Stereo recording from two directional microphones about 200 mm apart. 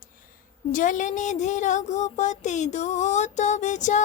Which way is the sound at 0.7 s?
40° left (ahead or behind).